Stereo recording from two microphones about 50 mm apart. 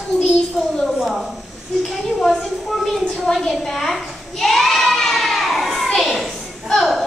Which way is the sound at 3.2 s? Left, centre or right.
Centre.